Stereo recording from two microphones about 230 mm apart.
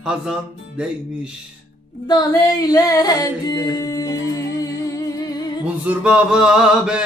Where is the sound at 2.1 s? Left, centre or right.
Centre.